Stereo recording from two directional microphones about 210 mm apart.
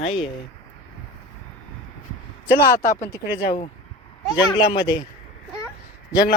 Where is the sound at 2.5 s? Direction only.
45° left (ahead or behind).